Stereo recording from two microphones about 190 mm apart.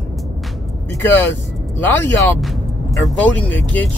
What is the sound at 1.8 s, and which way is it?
Speech, 10° left (ahead or behind).